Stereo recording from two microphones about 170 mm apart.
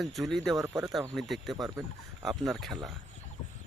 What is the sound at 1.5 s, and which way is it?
Speech, 20° right (ahead or behind).